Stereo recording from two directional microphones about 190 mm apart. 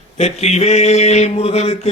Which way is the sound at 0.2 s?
35° left (ahead or behind).